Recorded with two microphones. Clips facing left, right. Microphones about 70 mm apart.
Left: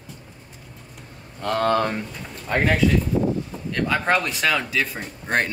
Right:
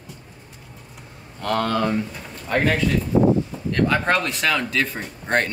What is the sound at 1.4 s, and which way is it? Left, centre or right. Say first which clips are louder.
Speech: even; left.